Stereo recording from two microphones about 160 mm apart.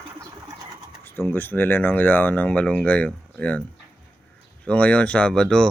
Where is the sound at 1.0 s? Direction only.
15° left (ahead or behind).